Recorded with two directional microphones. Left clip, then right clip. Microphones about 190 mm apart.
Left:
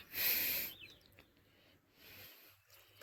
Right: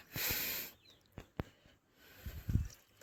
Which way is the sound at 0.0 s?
65° right (ahead or behind).